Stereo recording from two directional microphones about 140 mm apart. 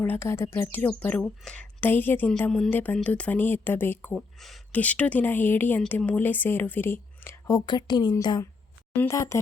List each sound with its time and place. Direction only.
0.0 s a woman's voice: 15° left (ahead or behind)